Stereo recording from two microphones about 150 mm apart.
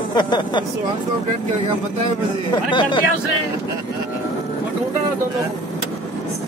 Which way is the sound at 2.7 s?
30° left (ahead or behind).